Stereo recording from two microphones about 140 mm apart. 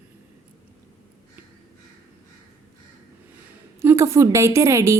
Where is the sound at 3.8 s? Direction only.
20° right (ahead or behind).